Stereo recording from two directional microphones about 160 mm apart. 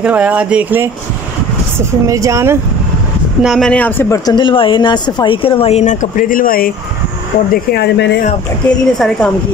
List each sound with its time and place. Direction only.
0.0 s speech: 10° right (ahead or behind)
2.0 s speech: 20° right (ahead or behind)
3.4 s speech: centre (ahead or behind)
4.3 s speech: 30° left (ahead or behind)
6.1 s speech: 60° left (ahead or behind)
7.7 s speech: 90° left
8.6 s a woman's voice: 5° left (ahead or behind)